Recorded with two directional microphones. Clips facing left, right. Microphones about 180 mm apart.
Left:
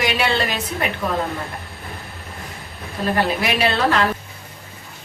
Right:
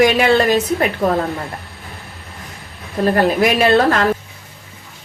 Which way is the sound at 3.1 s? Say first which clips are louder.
Right 6 dB; 50° right (ahead or behind).